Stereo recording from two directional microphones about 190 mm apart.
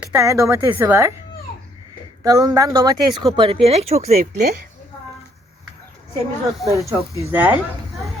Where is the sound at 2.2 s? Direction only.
15° right (ahead or behind); by 4.4 s 35° right (ahead or behind).